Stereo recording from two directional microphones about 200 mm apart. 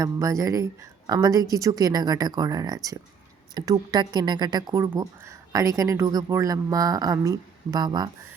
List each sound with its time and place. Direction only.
0.0 s a woman's voice: 15° right (ahead or behind)